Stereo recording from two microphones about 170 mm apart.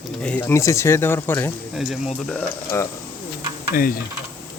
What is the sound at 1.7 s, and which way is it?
Speech, 5° right (ahead or behind).